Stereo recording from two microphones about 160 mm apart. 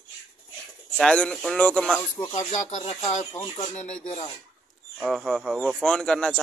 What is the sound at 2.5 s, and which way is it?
Speech, 50° left (ahead or behind).